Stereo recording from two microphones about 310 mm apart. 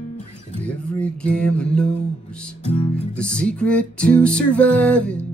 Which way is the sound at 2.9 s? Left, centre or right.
Centre.